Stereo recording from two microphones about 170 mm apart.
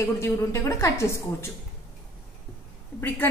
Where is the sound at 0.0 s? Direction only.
15° left (ahead or behind).